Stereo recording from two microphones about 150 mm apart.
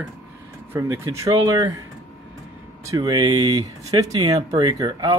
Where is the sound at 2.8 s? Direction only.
20° right (ahead or behind).